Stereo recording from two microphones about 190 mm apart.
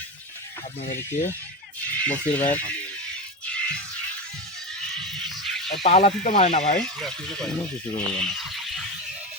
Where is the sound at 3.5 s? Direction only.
5° left (ahead or behind).